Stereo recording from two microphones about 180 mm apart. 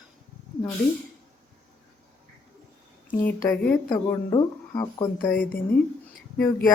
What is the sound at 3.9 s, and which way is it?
A woman's voice, 20° left (ahead or behind).